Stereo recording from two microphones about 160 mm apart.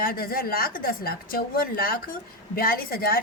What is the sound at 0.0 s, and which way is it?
A woman's voice, 65° left (ahead or behind).